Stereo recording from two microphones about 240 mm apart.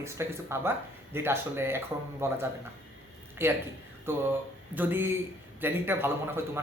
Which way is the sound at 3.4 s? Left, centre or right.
Centre.